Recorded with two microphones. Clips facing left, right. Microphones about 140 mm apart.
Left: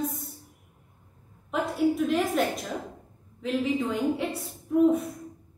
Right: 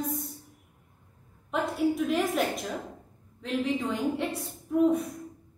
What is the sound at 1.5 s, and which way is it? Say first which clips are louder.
A woman's voice: left 2 dB; centre (ahead or behind).